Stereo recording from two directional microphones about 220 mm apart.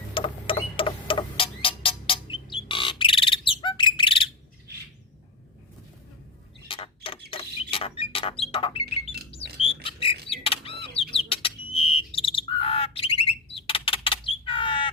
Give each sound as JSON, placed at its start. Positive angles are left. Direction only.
{"t": 0.1, "sound": "music", "side_deg": 25}
{"t": 6.7, "sound": "a sound", "side_deg": 25}
{"t": 10.9, "sound": "bird", "side_deg": 25}